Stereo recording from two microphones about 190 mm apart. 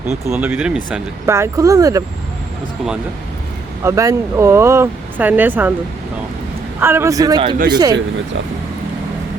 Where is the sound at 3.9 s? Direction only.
15° right (ahead or behind).